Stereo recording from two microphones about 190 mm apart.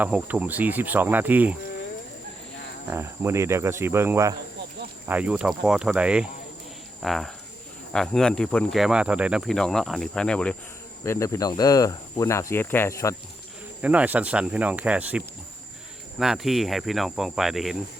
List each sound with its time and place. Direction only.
0.0 s speech: 5° right (ahead or behind)
2.9 s speech: 15° right (ahead or behind); by 10.5 s 5° left (ahead or behind)
11.0 s speech: 15° left (ahead or behind)
13.8 s speech: 10° right (ahead or behind)